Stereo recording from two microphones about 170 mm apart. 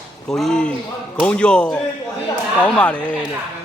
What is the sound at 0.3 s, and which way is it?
Speech, centre (ahead or behind).